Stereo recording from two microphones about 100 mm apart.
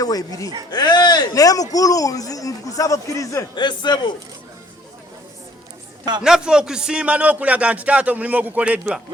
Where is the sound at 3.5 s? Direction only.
50° left (ahead or behind).